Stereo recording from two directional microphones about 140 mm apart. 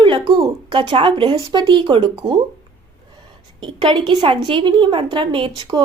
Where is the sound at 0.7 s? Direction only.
35° right (ahead or behind).